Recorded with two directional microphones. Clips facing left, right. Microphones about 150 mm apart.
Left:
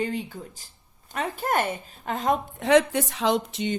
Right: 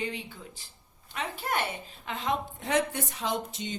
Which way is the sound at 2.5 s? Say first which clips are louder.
Left 9 dB; 90° left.